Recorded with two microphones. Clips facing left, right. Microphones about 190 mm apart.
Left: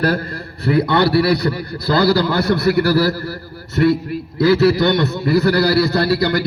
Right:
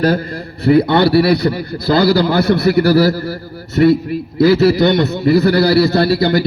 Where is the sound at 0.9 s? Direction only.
25° right (ahead or behind).